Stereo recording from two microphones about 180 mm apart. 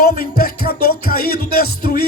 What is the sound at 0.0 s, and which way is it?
Music, 55° left (ahead or behind).